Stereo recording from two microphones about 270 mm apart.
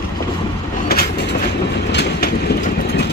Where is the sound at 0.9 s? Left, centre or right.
Left.